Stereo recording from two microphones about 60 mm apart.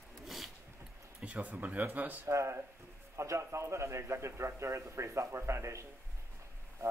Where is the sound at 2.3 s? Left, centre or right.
Right.